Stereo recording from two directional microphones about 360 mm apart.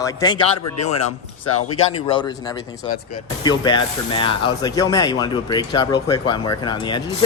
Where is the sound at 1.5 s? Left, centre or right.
Left.